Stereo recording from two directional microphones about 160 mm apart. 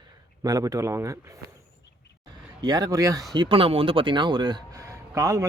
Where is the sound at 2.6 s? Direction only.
25° right (ahead or behind).